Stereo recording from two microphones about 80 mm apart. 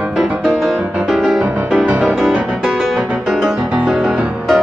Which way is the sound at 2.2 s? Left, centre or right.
Centre.